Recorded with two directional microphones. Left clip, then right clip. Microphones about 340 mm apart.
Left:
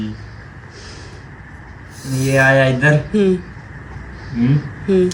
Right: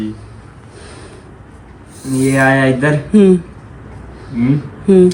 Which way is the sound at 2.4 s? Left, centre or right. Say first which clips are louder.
Even; centre.